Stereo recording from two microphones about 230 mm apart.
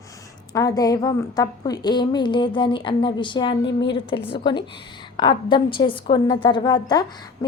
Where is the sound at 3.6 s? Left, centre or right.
Left.